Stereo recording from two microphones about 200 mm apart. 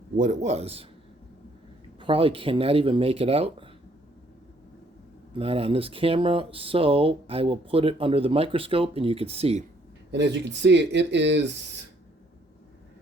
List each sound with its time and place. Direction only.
0.2 s speech: 35° right (ahead or behind)
2.0 s speech: 25° right (ahead or behind)
5.4 s speech: 30° right (ahead or behind)
10.1 s speech: 60° right (ahead or behind)